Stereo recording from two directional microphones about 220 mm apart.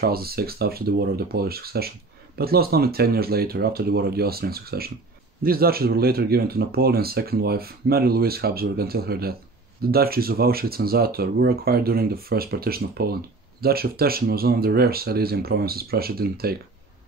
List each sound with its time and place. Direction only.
0.0 s speech: 45° right (ahead or behind)